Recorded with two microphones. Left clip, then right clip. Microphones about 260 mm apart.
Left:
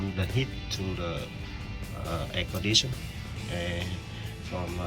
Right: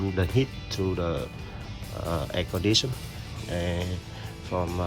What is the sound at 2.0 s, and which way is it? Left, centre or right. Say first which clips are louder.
Speech: right 3 dB; centre.